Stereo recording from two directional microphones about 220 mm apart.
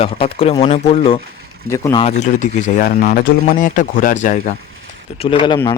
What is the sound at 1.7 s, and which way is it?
A man's voice, 15° left (ahead or behind).